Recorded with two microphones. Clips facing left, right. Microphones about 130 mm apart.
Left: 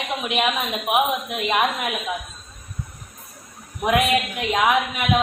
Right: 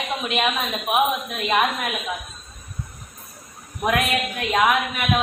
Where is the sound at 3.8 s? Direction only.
20° left (ahead or behind).